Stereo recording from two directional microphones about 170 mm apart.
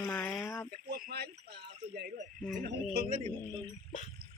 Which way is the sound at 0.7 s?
55° right (ahead or behind).